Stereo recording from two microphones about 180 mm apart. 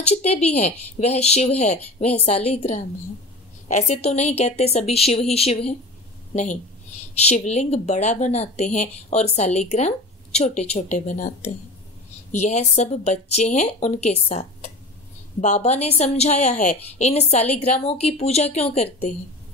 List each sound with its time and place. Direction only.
0.0 s speech: 35° left (ahead or behind)